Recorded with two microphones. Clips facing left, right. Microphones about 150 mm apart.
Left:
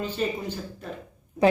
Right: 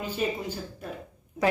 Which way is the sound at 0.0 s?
10° right (ahead or behind).